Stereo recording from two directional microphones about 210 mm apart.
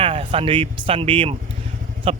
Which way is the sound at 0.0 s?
25° right (ahead or behind).